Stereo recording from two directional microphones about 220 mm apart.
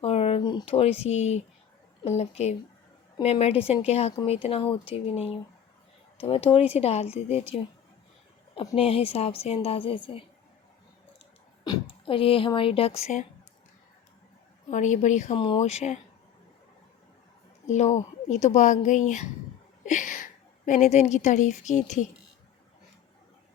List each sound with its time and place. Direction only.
0.0 s a woman's voice: 25° left (ahead or behind)
8.7 s a woman's voice: 25° left (ahead or behind)
11.6 s speech: 20° left (ahead or behind)
14.7 s speech: 35° left (ahead or behind)
17.7 s a woman's voice: 30° left (ahead or behind)